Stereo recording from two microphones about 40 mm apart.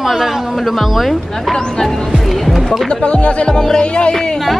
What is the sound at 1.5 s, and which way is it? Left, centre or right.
Speech, centre.